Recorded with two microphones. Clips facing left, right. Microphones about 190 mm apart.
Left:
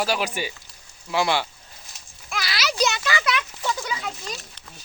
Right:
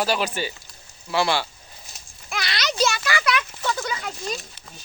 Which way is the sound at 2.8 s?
20° left (ahead or behind).